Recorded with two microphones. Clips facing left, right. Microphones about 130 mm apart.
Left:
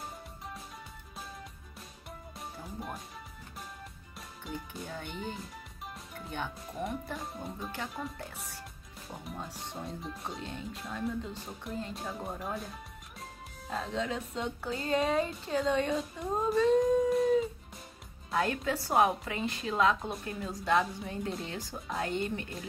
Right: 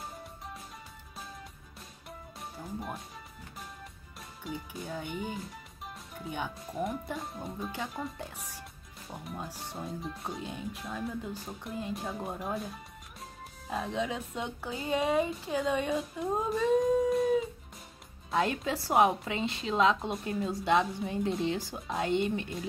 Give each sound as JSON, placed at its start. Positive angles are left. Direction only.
{"t": 2.6, "sound": "speech", "side_deg": 0}
{"t": 4.5, "sound": "speech", "side_deg": 0}
{"t": 8.0, "sound": "speech", "side_deg": -15}
{"t": 9.1, "sound": "speech", "side_deg": 0}
{"t": 11.7, "sound": "speech", "side_deg": -15}
{"t": 12.0, "sound": "speech", "side_deg": -5}
{"t": 13.7, "sound": "speech", "side_deg": -15}
{"t": 18.3, "sound": "a woman's voice", "side_deg": -20}